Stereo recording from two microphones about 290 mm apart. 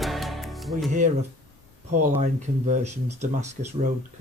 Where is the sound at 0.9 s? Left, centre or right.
Right.